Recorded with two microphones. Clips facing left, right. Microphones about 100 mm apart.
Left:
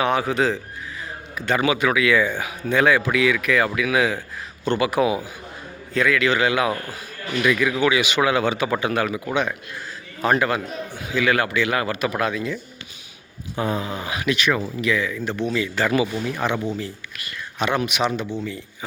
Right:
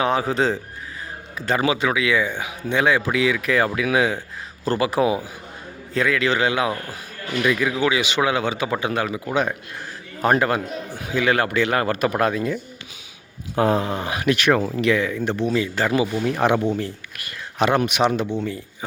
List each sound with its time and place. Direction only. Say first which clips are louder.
0.0 s speech: even; 30° right (ahead or behind)
10.2 s speech: right 1 dB; 35° right (ahead or behind)
13.6 s speech: right 5 dB; 70° right (ahead or behind)
14.0 s speech: right 2 dB; 45° right (ahead or behind)
15.4 s speech: even; 35° right (ahead or behind)
16.4 s speech: right 6 dB; 65° right (ahead or behind)
17.7 s speech: right 2 dB; 45° right (ahead or behind)
18.2 s speech: right 4 dB; 20° right (ahead or behind)